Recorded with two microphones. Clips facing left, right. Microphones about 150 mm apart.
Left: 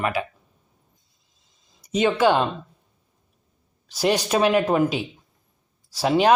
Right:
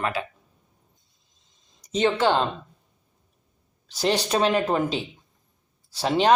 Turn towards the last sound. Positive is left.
turn(degrees=10)  # may be behind; listen again after turning